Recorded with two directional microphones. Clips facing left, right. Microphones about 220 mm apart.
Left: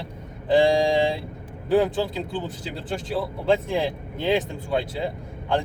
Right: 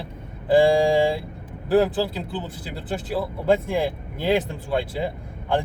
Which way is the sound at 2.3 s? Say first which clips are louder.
Left 1 dB; 5° right (ahead or behind).